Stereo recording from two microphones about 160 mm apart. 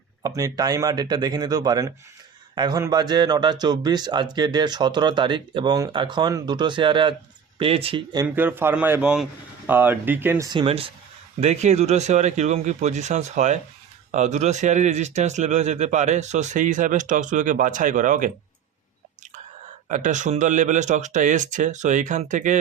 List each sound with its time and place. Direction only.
0.2 s speech: 20° right (ahead or behind); by 8.0 s 35° right (ahead or behind)
8.4 s a man's voice: 10° right (ahead or behind)
10.5 s speech: 35° right (ahead or behind); by 18.3 s 55° right (ahead or behind)
19.9 s speech: 50° right (ahead or behind)